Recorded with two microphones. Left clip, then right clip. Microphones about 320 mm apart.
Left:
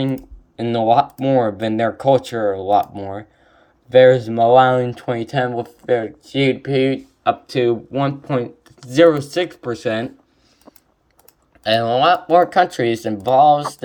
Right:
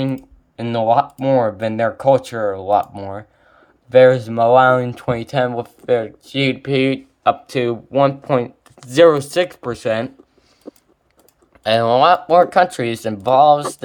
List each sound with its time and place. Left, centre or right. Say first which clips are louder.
0.9 s speech: even; centre
1.4 s speech: even; right
1.8 s speech: right 1 dB; centre
2.3 s speech: left 1 dB; right
2.7 s speech: even; centre
11.6 s speech: right 2 dB; centre